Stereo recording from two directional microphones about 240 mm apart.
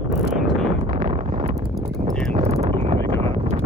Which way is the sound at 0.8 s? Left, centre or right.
Right.